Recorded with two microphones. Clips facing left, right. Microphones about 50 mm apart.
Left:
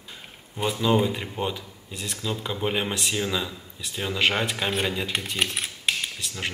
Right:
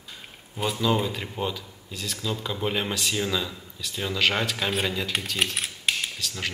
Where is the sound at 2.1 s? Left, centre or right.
Centre.